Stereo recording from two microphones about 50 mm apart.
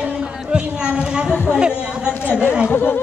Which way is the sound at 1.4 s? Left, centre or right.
Centre.